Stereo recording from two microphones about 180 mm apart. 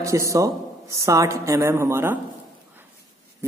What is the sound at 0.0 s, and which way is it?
A woman's voice, 15° right (ahead or behind).